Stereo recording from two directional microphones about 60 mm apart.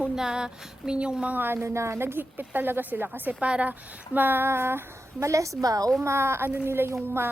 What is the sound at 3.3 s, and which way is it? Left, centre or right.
A woman's voice, centre.